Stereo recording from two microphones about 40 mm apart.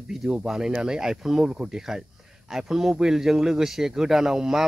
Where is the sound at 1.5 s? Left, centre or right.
Right.